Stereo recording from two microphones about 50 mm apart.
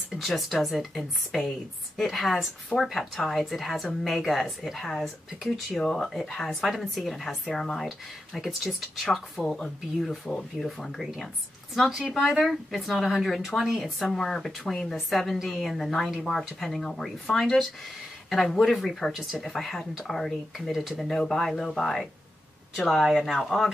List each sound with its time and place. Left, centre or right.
0.1 s a woman's voice: centre
11.0 s a woman's voice: centre
22.8 s a woman's voice: centre